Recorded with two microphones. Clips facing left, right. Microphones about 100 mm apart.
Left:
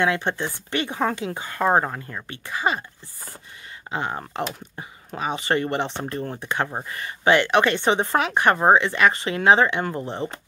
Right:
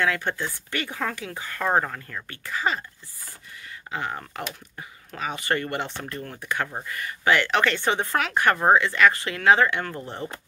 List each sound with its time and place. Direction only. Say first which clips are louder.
0.0 s speech: left 3 dB; 25° left (ahead or behind)
3.9 s speech: left 3 dB; 25° left (ahead or behind)